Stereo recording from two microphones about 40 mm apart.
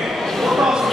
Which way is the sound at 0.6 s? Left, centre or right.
Centre.